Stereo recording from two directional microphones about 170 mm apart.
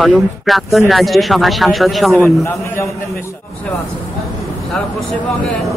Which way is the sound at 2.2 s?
15° left (ahead or behind).